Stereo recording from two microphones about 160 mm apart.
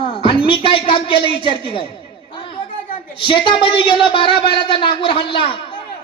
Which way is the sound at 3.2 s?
30° left (ahead or behind).